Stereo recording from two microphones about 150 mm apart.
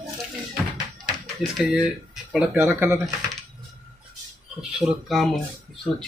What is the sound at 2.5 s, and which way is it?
Speech, 15° right (ahead or behind).